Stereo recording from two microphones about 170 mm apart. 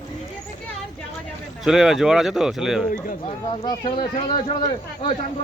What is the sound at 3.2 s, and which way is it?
Speech, 35° left (ahead or behind).